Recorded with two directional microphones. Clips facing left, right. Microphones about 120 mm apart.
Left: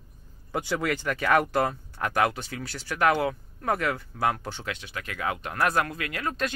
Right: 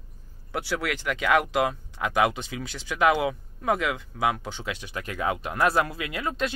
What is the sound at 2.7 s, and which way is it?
Speech, centre (ahead or behind).